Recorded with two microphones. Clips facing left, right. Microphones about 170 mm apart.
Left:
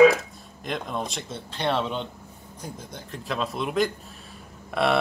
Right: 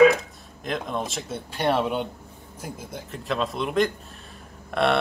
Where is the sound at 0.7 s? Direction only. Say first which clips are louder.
Right 2 dB; centre (ahead or behind).